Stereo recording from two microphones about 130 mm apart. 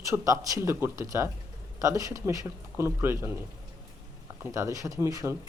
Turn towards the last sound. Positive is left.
turn(degrees=-25)  # may be behind; listen again after turning